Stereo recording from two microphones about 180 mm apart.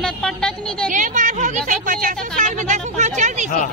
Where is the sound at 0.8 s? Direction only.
45° right (ahead or behind).